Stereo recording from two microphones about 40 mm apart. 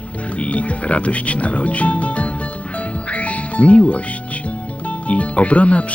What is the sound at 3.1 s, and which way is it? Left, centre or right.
Music, left.